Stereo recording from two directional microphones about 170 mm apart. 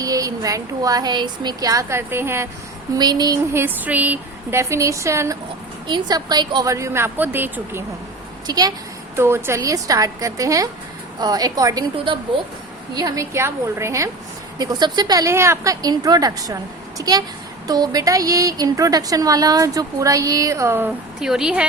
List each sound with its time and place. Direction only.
0.0 s speech: 20° right (ahead or behind)
8.4 s a woman's voice: 25° right (ahead or behind)
21.2 s a woman's voice: 5° right (ahead or behind)